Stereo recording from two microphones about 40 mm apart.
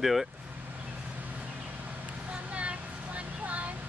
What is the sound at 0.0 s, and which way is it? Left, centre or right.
Speech, centre.